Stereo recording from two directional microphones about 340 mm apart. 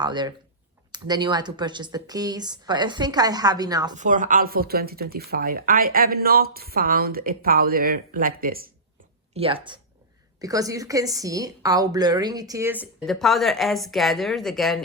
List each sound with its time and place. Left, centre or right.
0.0 s a woman's voice: centre
3.9 s a woman's voice: right; by 14.8 s centre